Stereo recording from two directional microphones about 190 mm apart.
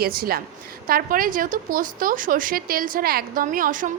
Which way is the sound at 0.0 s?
50° right (ahead or behind).